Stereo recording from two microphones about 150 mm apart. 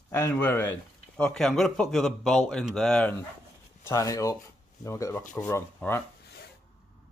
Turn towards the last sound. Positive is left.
turn(degrees=90)